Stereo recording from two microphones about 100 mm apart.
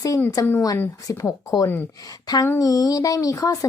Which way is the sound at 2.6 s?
35° left (ahead or behind).